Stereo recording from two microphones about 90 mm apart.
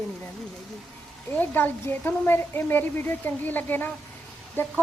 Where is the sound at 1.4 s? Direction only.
20° left (ahead or behind).